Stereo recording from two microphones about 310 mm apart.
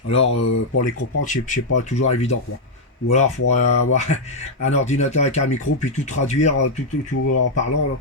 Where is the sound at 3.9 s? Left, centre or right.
Left.